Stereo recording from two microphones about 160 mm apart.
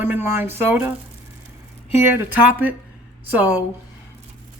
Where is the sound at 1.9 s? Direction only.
15° right (ahead or behind).